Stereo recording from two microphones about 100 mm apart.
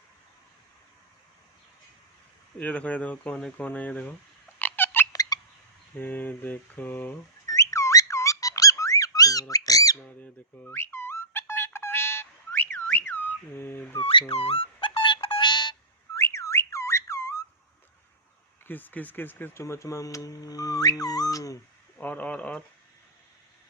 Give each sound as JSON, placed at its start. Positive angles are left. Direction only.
{"t": 2.6, "sound": "speech", "side_deg": 15}
{"t": 4.6, "sound": "cat", "side_deg": 20}
{"t": 5.1, "sound": "fowl", "side_deg": 40}
{"t": 6.0, "sound": "mantra", "side_deg": 20}
{"t": 7.4, "sound": "music", "side_deg": 35}
{"t": 10.2, "sound": "a sound", "side_deg": 15}
{"t": 14.0, "sound": "speech", "side_deg": 70}
{"t": 14.8, "sound": "music", "side_deg": 55}
{"t": 16.1, "sound": "whistling", "side_deg": 30}
{"t": 18.7, "sound": "speech", "side_deg": 20}
{"t": 21.9, "sound": "speech", "side_deg": 15}